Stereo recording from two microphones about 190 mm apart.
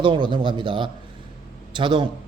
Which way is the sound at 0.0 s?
25° right (ahead or behind).